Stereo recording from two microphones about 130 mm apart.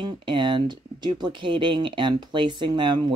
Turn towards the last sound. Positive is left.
turn(degrees=-35)  # may be behind; listen again after turning